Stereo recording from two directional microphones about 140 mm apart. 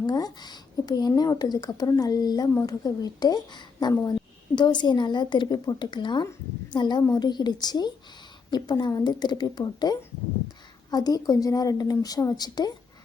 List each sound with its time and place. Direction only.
0.0 s a woman's voice: 30° left (ahead or behind)